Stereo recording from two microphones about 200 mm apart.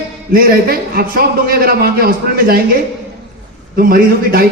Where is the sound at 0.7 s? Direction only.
45° right (ahead or behind).